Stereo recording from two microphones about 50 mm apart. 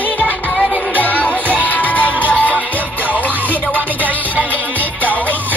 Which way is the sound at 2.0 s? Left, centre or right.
Right.